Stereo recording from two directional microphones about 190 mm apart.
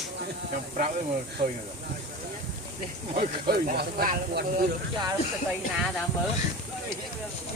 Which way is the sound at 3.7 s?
50° right (ahead or behind).